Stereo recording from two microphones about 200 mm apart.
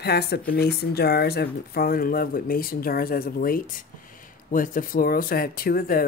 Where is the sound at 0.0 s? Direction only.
55° left (ahead or behind).